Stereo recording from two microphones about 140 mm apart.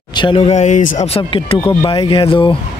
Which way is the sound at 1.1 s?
40° left (ahead or behind).